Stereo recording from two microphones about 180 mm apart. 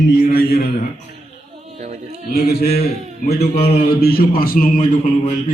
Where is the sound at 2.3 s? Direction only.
60° left (ahead or behind).